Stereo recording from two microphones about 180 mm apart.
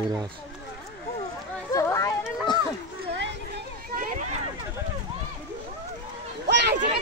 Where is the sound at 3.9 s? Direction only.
50° right (ahead or behind).